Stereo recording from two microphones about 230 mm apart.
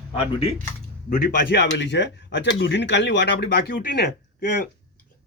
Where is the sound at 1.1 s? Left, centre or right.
Left.